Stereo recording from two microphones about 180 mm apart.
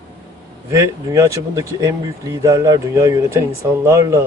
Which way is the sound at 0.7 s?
15° right (ahead or behind).